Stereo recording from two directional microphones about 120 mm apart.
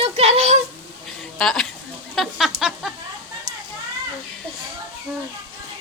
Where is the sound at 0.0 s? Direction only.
60° right (ahead or behind).